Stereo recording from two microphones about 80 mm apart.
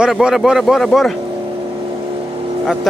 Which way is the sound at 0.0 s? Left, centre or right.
Centre.